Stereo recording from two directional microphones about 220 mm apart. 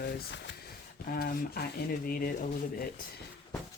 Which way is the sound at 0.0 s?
55° left (ahead or behind).